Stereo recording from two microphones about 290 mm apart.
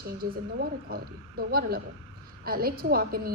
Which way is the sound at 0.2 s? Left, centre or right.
Right.